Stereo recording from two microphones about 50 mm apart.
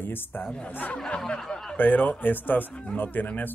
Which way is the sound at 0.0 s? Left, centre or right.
Left.